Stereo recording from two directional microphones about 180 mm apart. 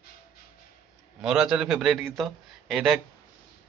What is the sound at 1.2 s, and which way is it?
A man's voice, 5° right (ahead or behind).